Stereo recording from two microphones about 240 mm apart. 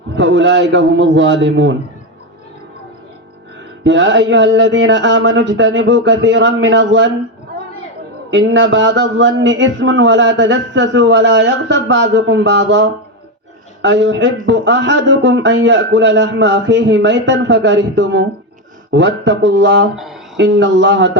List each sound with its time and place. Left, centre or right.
0.2 s speech: right
3.8 s speech: right
8.3 s speech: right
20.0 s a sound: centre
20.3 s speech: right